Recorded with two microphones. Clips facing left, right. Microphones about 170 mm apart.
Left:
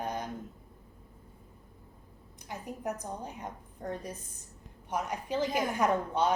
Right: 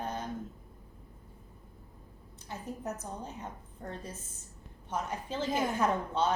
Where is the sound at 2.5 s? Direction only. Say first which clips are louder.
Left 2 dB; 15° left (ahead or behind).